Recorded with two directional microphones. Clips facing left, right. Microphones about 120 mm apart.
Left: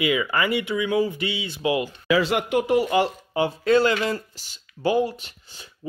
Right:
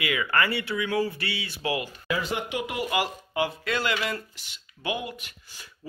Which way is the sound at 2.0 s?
90° left.